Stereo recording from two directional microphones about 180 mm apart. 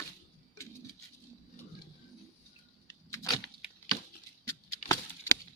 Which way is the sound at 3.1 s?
15° left (ahead or behind).